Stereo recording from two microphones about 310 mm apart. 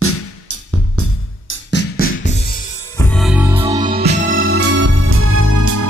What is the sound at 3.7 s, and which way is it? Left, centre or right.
Music, right.